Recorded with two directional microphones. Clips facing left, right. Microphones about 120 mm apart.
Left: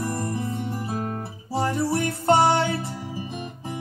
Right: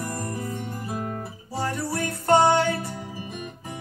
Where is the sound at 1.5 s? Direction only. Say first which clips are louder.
Left 5 dB; 25° left (ahead or behind).